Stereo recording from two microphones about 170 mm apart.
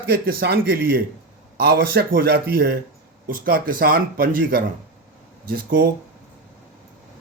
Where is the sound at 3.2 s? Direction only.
55° right (ahead or behind).